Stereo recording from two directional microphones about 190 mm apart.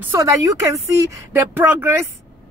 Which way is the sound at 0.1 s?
15° right (ahead or behind).